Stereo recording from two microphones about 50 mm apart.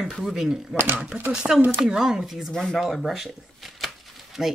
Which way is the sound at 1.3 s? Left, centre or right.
Centre.